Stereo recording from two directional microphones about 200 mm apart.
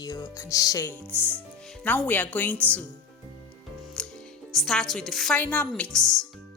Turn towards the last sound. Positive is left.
turn(degrees=0)  # may be behind; listen again after turning